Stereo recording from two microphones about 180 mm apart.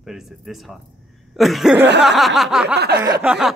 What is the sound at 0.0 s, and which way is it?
Speech, centre (ahead or behind).